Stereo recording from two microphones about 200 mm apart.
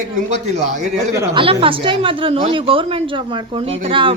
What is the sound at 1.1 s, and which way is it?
Speech, 15° right (ahead or behind).